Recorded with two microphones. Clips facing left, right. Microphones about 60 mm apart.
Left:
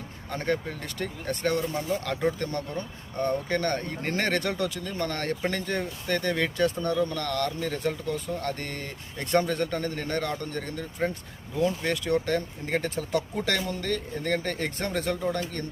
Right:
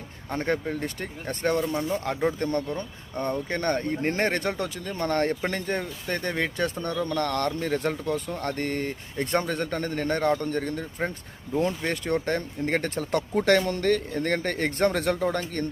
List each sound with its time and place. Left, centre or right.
0.3 s speech: right
7.0 s a man's voice: right